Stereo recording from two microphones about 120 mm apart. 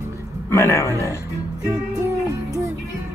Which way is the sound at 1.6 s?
30° right (ahead or behind).